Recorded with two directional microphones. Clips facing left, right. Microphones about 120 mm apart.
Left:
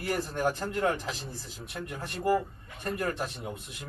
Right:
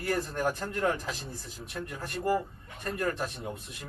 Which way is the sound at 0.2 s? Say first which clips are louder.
Left 1 dB; 5° left (ahead or behind).